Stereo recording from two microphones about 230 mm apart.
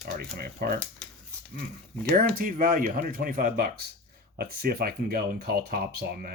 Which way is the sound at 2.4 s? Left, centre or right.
Right.